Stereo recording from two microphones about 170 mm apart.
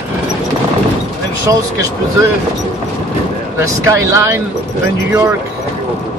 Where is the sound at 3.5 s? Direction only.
15° right (ahead or behind).